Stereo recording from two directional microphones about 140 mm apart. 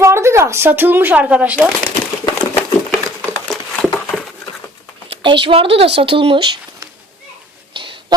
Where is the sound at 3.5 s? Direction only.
Centre (ahead or behind).